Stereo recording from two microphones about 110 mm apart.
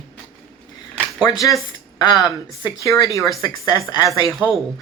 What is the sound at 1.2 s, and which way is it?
Speech, 30° left (ahead or behind).